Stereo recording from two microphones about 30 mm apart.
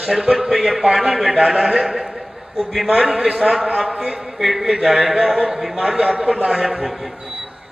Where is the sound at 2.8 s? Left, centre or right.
Right.